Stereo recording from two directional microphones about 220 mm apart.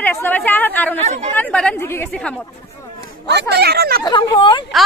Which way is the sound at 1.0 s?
30° right (ahead or behind).